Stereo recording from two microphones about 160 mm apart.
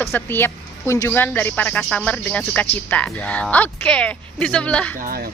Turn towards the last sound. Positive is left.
turn(degrees=-65)  # may be behind; listen again after turning